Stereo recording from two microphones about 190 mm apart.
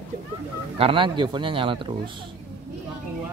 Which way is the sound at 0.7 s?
30° right (ahead or behind).